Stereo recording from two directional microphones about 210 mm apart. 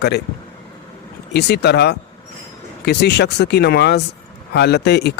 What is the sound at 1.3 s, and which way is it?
Speech, 50° left (ahead or behind).